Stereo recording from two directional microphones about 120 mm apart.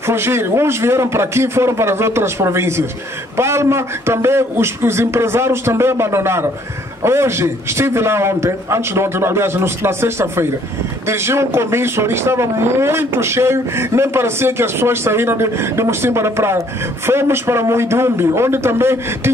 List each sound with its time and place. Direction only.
0.0 s a man's voice: 20° right (ahead or behind)